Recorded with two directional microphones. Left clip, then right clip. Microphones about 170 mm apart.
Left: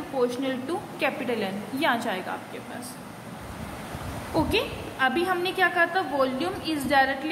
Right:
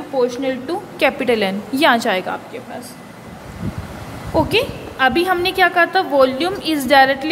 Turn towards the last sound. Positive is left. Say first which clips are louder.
# right 10 dB
turn(degrees=-50)  # may be behind; listen again after turning